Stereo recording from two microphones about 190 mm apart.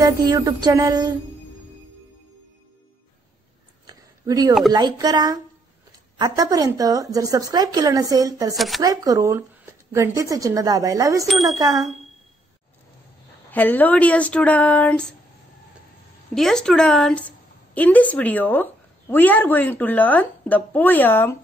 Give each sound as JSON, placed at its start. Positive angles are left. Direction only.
{"t": 0.0, "sound": "a woman's voice", "side_deg": -20}
{"t": 3.8, "sound": "a sound", "side_deg": -20}
{"t": 4.7, "sound": "a woman's voice", "side_deg": -20}
{"t": 8.5, "sound": "a woman's voice", "side_deg": 0}
{"t": 8.8, "sound": "a woman's voice", "side_deg": -20}
{"t": 13.5, "sound": "speech", "side_deg": 10}
{"t": 16.3, "sound": "a woman's voice", "side_deg": 5}